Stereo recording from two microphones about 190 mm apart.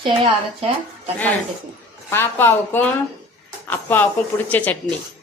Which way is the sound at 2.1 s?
10° left (ahead or behind).